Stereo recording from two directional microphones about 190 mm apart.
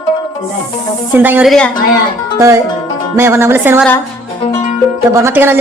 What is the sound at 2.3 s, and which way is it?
Music, 15° right (ahead or behind).